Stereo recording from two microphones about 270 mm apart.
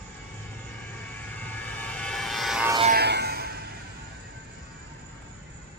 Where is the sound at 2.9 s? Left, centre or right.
Right.